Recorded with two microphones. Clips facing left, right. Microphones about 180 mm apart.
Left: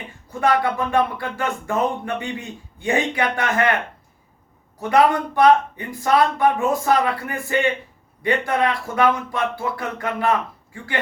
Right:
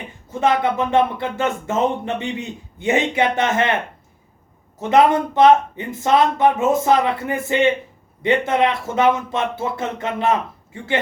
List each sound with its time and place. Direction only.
0.3 s speech: 20° right (ahead or behind)
4.8 s speech: 20° right (ahead or behind)